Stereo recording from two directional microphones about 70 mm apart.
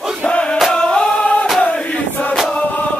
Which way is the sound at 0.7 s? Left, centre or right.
Centre.